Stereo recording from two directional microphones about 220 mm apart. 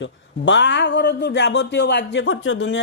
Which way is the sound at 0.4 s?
55° left (ahead or behind).